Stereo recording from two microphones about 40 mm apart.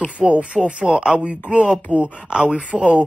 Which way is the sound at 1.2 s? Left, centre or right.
Right.